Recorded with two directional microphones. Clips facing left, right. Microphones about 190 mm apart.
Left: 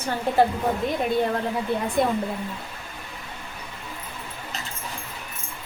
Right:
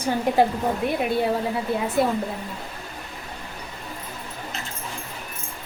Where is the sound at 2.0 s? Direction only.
5° right (ahead or behind).